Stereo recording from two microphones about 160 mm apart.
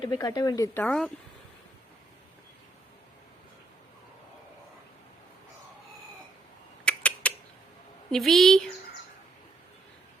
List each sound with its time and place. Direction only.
0.0 s speech: 25° left (ahead or behind); by 1.1 s 5° left (ahead or behind)
6.8 s rodents: 10° left (ahead or behind)
8.1 s a woman's voice: centre (ahead or behind)